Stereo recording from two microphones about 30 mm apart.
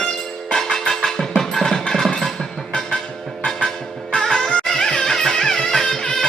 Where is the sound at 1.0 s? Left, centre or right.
Centre.